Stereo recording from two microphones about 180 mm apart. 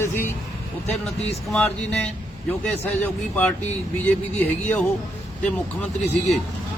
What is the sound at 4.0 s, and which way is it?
Speech, 10° left (ahead or behind).